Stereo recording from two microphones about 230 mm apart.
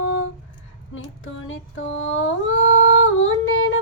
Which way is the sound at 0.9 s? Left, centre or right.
Left.